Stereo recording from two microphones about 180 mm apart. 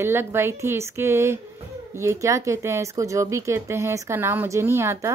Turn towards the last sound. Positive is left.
turn(degrees=-15)  # may be behind; listen again after turning